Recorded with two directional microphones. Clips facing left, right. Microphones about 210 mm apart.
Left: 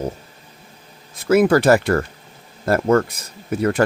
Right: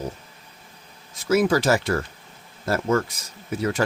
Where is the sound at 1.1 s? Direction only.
60° left (ahead or behind).